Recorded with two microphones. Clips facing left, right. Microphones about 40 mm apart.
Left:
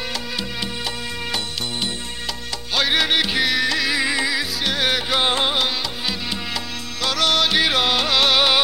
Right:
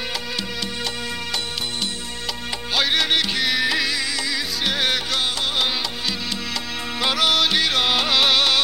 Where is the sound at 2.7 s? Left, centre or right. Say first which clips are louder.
Left 1 dB; centre.